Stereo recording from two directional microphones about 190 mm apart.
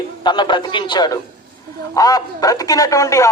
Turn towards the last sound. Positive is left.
turn(degrees=15)  # may be behind; listen again after turning